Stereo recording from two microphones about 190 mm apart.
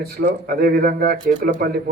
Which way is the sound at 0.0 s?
55° right (ahead or behind).